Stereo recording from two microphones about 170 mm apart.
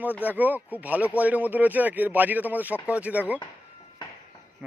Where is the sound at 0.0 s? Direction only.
10° right (ahead or behind).